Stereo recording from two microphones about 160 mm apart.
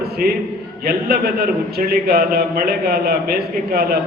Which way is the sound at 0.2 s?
70° right (ahead or behind).